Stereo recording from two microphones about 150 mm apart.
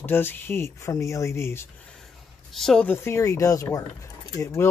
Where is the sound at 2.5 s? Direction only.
5° left (ahead or behind).